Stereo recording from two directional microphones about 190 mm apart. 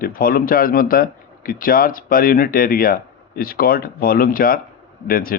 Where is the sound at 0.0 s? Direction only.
50° left (ahead or behind).